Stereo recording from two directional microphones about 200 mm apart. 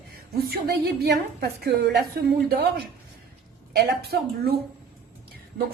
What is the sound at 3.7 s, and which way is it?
Speech, 55° right (ahead or behind).